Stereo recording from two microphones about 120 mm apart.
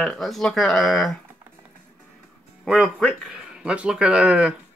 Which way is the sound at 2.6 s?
Centre (ahead or behind).